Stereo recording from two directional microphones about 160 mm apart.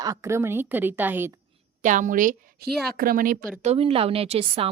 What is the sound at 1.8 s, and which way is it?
A woman's voice, 50° right (ahead or behind).